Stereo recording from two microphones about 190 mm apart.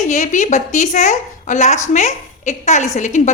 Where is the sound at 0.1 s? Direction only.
40° left (ahead or behind).